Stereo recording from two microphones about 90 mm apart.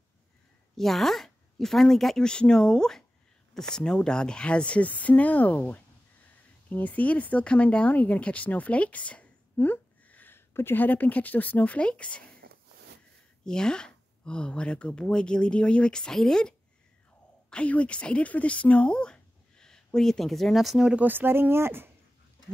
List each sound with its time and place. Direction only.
0.7 s speech: centre (ahead or behind)
13.5 s speech: 10° left (ahead or behind)
21.0 s speech: 20° right (ahead or behind)